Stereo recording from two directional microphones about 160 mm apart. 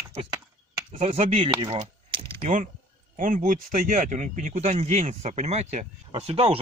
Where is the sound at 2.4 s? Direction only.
50° right (ahead or behind).